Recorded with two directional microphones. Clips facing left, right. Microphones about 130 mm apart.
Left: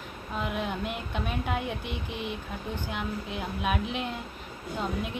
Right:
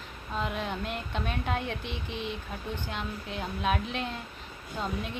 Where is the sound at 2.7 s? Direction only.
10° left (ahead or behind).